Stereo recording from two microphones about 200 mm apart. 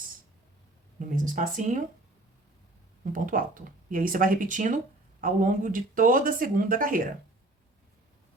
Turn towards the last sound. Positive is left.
turn(degrees=-45)  # may be behind; listen again after turning